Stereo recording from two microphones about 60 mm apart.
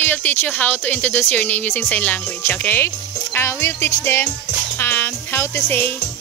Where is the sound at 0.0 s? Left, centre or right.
Left.